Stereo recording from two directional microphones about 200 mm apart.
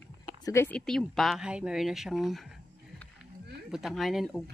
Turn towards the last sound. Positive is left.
turn(degrees=0)  # may be behind; listen again after turning